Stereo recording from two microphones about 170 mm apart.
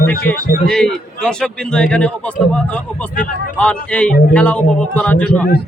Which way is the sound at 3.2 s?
5° left (ahead or behind).